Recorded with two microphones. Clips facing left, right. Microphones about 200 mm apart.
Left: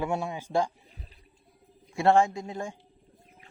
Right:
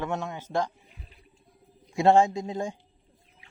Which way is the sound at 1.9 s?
20° right (ahead or behind).